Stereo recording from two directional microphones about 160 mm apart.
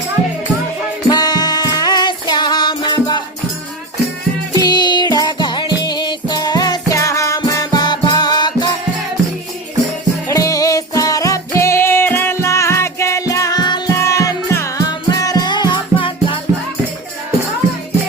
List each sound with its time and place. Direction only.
1.1 s music: 25° left (ahead or behind)
4.5 s music: 25° left (ahead or behind)
10.2 s music: 20° left (ahead or behind)